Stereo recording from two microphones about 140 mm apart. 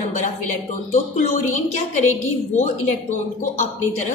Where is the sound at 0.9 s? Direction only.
60° left (ahead or behind).